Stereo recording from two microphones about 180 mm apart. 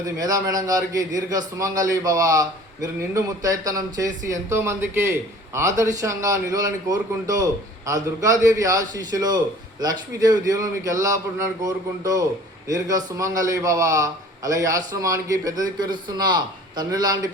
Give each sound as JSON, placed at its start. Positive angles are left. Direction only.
{"t": 0.0, "sound": "a man's voice", "side_deg": -20}